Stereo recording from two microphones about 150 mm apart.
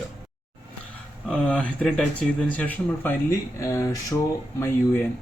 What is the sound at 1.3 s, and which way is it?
Speech, 10° left (ahead or behind).